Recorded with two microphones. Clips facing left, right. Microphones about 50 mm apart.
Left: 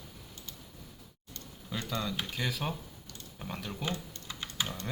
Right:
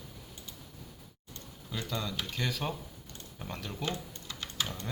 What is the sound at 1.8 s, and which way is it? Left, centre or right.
Speech, centre.